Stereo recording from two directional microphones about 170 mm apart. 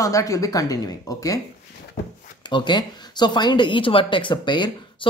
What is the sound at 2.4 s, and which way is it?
A woman's voice, 25° left (ahead or behind).